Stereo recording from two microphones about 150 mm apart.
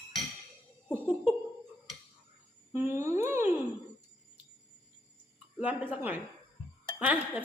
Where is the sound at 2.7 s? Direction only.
15° right (ahead or behind).